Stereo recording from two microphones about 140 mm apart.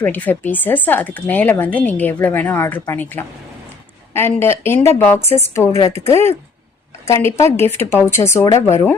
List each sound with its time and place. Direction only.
0.0 s speech: 10° left (ahead or behind)
5.9 s speech: 50° left (ahead or behind)
7.1 s speech: 20° left (ahead or behind)